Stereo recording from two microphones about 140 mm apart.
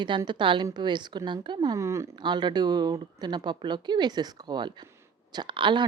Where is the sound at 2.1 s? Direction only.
35° right (ahead or behind).